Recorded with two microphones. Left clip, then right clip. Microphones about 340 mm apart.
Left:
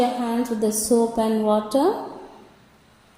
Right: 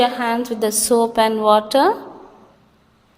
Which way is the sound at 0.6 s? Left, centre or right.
Right.